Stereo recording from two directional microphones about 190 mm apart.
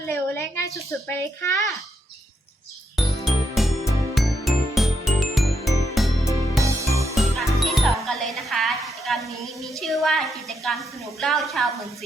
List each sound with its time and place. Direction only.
0.1 s a woman's voice: 15° left (ahead or behind)
2.9 s music: centre (ahead or behind)
6.6 s music: 15° right (ahead or behind)
7.2 s music: centre (ahead or behind)